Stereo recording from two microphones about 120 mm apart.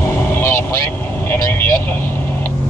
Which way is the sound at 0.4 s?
20° left (ahead or behind).